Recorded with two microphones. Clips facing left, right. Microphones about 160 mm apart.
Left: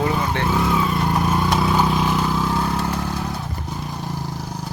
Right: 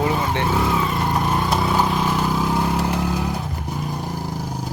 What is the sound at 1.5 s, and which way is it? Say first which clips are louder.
Vehicle: left 1 dB; 5° right (ahead or behind).